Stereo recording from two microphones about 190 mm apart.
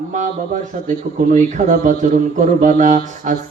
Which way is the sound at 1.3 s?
40° right (ahead or behind).